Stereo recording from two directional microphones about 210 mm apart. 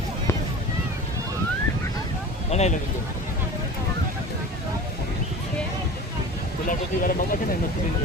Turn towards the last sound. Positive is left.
turn(degrees=40)  # may be behind; listen again after turning